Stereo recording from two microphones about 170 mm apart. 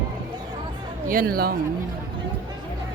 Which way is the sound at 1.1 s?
60° right (ahead or behind).